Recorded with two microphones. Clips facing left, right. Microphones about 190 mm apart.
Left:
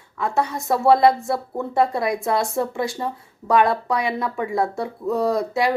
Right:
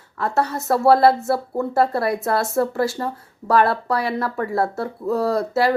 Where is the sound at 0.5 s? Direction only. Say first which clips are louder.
Right 1 dB; centre (ahead or behind).